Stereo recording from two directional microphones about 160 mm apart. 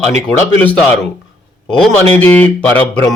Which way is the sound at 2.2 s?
10° left (ahead or behind).